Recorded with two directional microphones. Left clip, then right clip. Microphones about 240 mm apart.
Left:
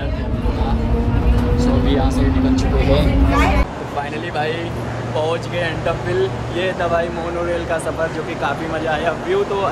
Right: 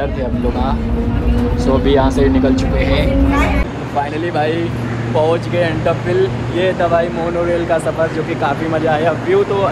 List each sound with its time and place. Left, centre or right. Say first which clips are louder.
1.6 s speech: right 7 dB; centre
2.5 s speech: right 1 dB; left
5.1 s speech: right 6 dB; centre
8.4 s speech: right 5 dB; centre